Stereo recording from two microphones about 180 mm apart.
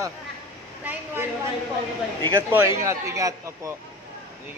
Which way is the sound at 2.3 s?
15° right (ahead or behind).